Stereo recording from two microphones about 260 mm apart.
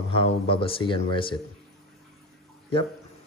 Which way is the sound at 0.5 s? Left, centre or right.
Left.